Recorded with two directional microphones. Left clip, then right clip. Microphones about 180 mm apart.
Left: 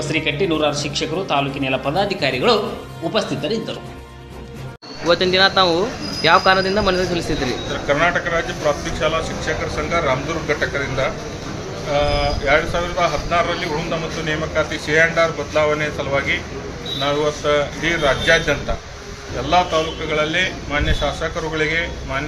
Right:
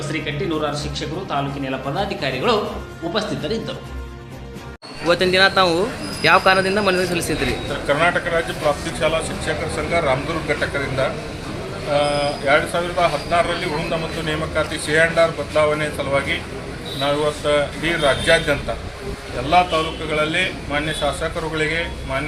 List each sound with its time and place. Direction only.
0.6 s a man's voice: 20° left (ahead or behind); by 3.8 s centre (ahead or behind)
5.0 s a man's voice: centre (ahead or behind)